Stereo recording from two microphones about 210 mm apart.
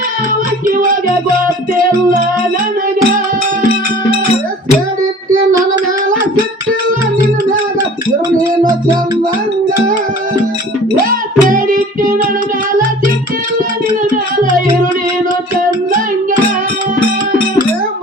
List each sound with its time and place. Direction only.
11.0 s music: 40° right (ahead or behind)